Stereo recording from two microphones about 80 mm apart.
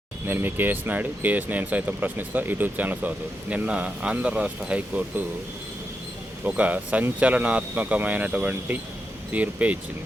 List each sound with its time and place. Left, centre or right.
0.3 s speech: right
6.4 s speech: centre